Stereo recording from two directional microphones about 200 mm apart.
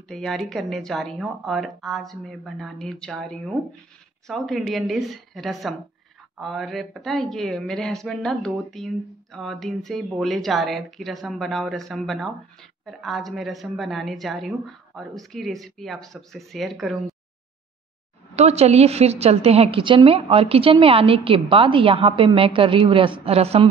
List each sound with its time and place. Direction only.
0.1 s speech: centre (ahead or behind)
18.3 s a woman's voice: 30° right (ahead or behind)